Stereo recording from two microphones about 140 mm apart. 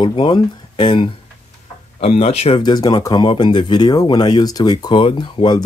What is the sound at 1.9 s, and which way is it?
Speech, 50° left (ahead or behind).